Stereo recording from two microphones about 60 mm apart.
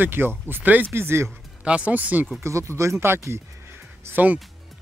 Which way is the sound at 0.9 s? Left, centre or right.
Right.